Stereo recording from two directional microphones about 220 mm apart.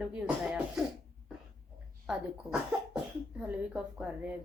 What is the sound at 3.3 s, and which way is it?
Speech, 5° right (ahead or behind).